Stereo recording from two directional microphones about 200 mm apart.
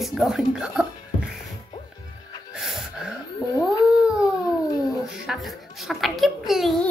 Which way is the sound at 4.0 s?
5° right (ahead or behind).